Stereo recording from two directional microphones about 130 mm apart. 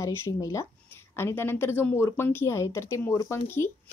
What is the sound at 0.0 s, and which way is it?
A child's voice, 20° left (ahead or behind).